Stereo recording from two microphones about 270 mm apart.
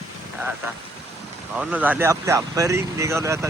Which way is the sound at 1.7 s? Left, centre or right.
Centre.